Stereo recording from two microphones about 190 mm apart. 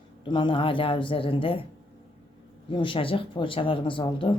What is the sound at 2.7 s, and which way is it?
Speech, 25° left (ahead or behind).